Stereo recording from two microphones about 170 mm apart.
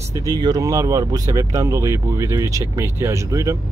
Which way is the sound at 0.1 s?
20° right (ahead or behind).